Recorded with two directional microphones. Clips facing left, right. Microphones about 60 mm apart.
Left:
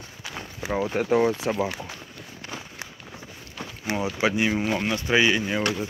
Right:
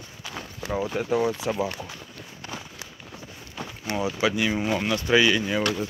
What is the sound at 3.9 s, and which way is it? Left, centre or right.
Speech, left.